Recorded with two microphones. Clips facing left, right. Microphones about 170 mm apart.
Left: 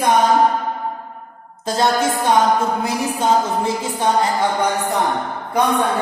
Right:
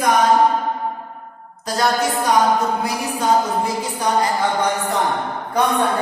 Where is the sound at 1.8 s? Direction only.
25° left (ahead or behind).